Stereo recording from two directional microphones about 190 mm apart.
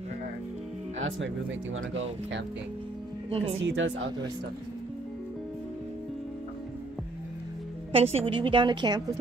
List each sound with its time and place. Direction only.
0.9 s speech: 85° right
3.3 s speech: 30° right (ahead or behind)
3.5 s a woman's voice: 85° right
7.9 s a woman's voice: 30° right (ahead or behind)